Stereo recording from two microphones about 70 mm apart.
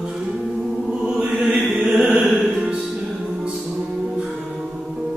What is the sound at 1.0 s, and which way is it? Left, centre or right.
Mantra, centre.